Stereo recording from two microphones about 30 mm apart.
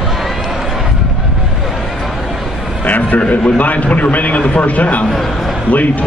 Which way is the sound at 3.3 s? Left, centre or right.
Left.